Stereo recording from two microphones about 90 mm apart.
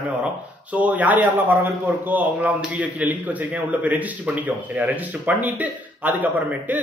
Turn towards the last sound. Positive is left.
turn(degrees=-20)  # may be behind; listen again after turning